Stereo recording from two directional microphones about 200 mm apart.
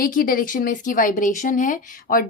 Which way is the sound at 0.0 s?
45° left (ahead or behind).